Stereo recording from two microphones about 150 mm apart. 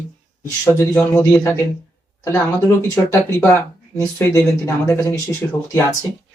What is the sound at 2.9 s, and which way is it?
Speech, 10° left (ahead or behind).